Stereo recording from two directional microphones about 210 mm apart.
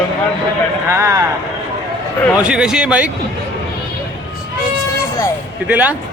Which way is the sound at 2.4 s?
5° right (ahead or behind).